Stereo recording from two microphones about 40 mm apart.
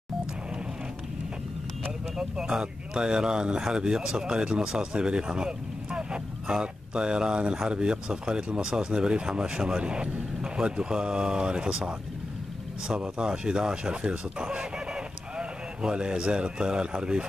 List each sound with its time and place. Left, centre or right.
2.1 s speech: centre